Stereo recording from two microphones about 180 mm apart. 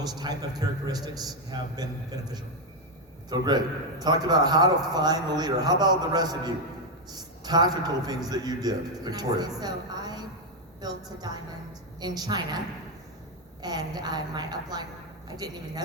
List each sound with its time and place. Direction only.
0.3 s a man's voice: 25° right (ahead or behind)